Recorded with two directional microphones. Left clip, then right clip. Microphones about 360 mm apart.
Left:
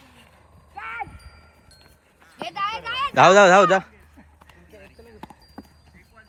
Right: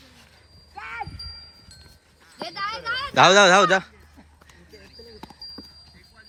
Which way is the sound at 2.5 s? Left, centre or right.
Left.